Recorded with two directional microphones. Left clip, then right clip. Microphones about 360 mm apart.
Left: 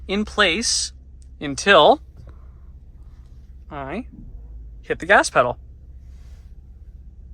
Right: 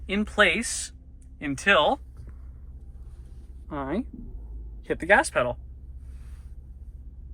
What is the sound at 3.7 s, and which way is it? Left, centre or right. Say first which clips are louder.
Speech: left 1 dB; centre.